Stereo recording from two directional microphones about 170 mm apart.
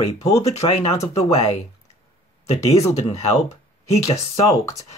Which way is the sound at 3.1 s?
40° left (ahead or behind).